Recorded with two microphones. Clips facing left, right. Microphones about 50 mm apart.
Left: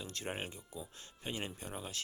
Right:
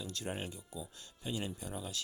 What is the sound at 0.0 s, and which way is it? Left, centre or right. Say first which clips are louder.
Speech: right 1 dB; left.